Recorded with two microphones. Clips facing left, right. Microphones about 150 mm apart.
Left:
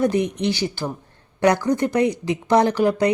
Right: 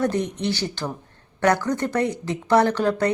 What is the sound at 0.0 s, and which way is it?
A woman's voice, 10° left (ahead or behind).